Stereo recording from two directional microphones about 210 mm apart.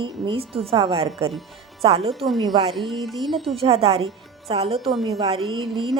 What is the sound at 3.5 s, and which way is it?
Speech, 30° right (ahead or behind).